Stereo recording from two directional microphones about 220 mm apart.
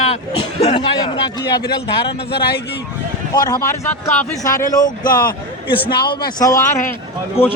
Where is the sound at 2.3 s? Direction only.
45° left (ahead or behind).